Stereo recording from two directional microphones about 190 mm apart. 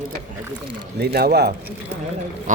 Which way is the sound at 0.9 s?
55° right (ahead or behind).